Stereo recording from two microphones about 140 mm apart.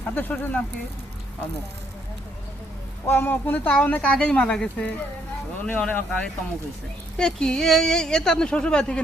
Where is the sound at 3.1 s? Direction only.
15° left (ahead or behind).